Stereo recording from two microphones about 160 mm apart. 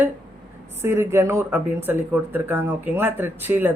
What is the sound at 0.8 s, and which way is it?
Speech, 15° right (ahead or behind).